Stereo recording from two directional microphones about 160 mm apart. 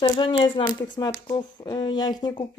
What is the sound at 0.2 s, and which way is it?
Speech, 35° left (ahead or behind).